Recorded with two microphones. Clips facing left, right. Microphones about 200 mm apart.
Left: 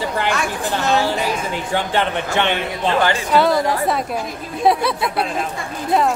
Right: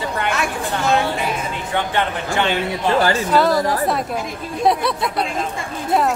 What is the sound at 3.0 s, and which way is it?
Speech, 40° right (ahead or behind).